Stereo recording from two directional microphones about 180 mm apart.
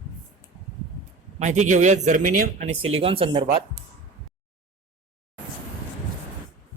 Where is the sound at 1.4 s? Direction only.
40° right (ahead or behind).